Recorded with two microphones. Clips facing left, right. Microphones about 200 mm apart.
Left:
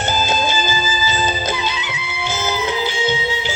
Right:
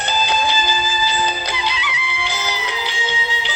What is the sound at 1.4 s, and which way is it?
Music, 45° left (ahead or behind).